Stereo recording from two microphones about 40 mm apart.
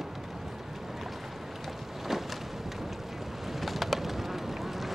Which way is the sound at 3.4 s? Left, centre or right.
Centre.